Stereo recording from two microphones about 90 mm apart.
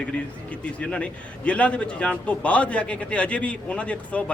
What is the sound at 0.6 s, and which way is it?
A man's voice, 10° left (ahead or behind).